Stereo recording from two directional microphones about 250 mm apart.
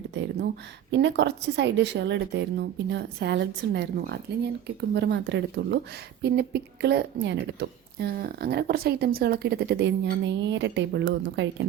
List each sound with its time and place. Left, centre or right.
0.1 s a woman's voice: right